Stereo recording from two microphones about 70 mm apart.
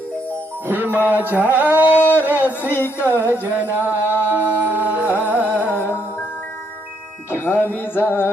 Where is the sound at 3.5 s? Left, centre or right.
Right.